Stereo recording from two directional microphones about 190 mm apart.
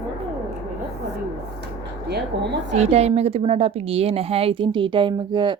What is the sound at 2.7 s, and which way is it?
A woman's voice, 35° right (ahead or behind).